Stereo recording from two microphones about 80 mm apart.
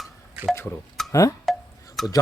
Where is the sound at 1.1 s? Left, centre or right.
Left.